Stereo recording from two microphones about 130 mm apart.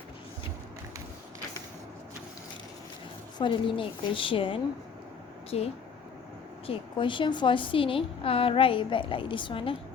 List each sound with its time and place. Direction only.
3.3 s a woman's voice: 40° left (ahead or behind)
6.7 s a woman's voice: 40° left (ahead or behind)